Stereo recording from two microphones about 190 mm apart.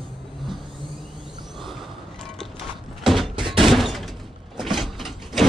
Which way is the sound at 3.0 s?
Centre (ahead or behind).